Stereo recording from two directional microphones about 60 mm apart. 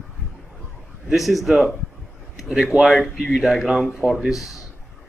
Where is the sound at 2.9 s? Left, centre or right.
Centre.